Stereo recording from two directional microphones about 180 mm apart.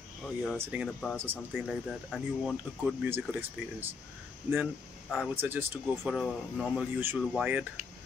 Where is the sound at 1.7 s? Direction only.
Centre (ahead or behind).